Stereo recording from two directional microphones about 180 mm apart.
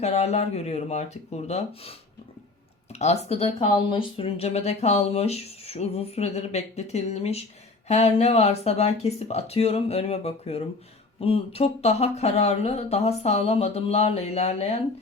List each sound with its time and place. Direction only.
0.0 s speech: 35° left (ahead or behind)